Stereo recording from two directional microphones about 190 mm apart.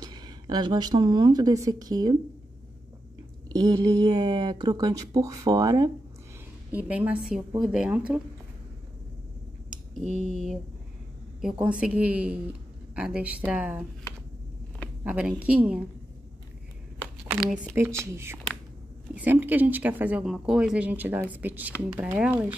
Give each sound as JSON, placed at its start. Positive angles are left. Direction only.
{"t": 0.0, "sound": "a woman's voice", "side_deg": -20}
{"t": 3.4, "sound": "speech", "side_deg": -20}
{"t": 6.7, "sound": "a woman's voice", "side_deg": -10}
{"t": 10.0, "sound": "speech", "side_deg": 40}
{"t": 11.5, "sound": "speech", "side_deg": -10}
{"t": 15.0, "sound": "speech", "side_deg": -5}
{"t": 17.2, "sound": "speech", "side_deg": -5}